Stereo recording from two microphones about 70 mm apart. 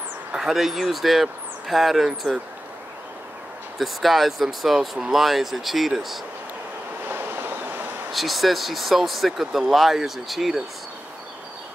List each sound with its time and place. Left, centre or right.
0.4 s speech: centre
3.7 s speech: centre
7.1 s a sound: right
8.1 s speech: centre